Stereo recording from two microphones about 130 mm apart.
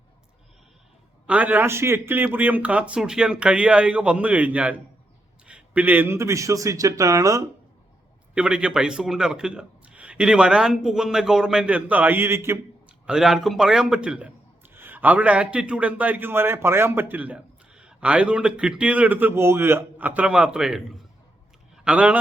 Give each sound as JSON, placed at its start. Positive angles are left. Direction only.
{"t": 1.3, "sound": "a man's voice", "side_deg": -10}
{"t": 8.4, "sound": "a man's voice", "side_deg": -10}
{"t": 13.1, "sound": "a man's voice", "side_deg": -5}